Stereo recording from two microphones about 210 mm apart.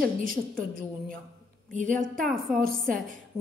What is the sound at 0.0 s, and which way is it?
A woman's voice, 45° right (ahead or behind).